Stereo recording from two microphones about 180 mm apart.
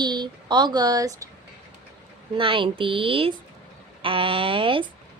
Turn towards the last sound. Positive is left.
turn(degrees=-30)  # may be behind; listen again after turning